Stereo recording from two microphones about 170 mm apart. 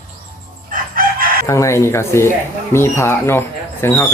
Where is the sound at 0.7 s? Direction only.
55° right (ahead or behind).